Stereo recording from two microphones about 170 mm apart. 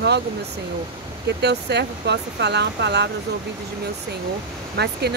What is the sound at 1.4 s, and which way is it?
Speech, 85° right.